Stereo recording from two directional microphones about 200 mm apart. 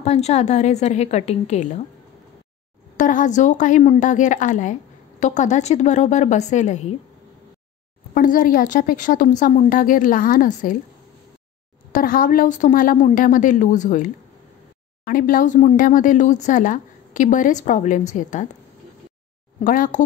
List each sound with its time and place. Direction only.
0.0 s speech: 35° left (ahead or behind)
3.0 s speech: 40° left (ahead or behind)
8.1 s speech: 45° left (ahead or behind)
11.9 s speech: 45° left (ahead or behind)
19.6 s speech: 45° left (ahead or behind)